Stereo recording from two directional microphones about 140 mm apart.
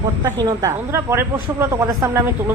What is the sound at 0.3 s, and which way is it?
Speech, 20° right (ahead or behind).